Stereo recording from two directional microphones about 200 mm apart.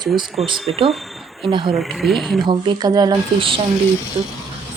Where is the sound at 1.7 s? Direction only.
Centre (ahead or behind).